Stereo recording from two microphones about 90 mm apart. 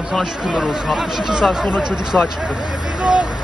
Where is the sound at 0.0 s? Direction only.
5° right (ahead or behind).